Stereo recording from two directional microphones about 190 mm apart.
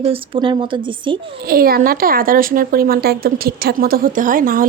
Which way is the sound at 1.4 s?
50° right (ahead or behind).